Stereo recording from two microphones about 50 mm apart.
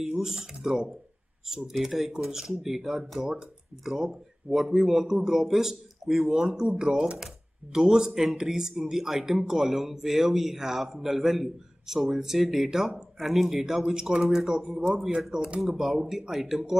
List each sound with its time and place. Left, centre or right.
0.0 s a man's voice: centre
15.6 s a man's voice: centre